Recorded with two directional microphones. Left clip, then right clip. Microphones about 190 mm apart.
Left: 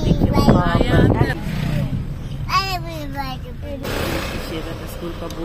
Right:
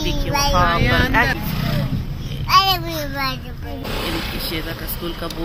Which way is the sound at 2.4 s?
30° right (ahead or behind).